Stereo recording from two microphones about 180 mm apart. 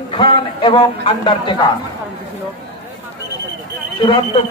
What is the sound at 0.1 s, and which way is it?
A man's voice, 30° left (ahead or behind).